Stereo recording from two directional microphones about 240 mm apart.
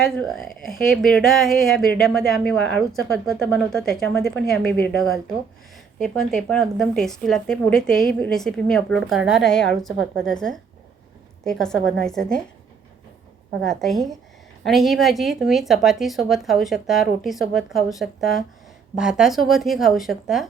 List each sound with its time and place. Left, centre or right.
0.0 s speech: centre
11.4 s speech: centre
13.7 s speech: centre